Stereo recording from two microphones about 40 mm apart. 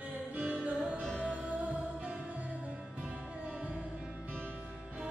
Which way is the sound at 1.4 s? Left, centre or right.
Right.